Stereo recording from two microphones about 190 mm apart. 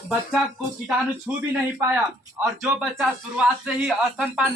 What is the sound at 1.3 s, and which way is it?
Speech, 10° right (ahead or behind).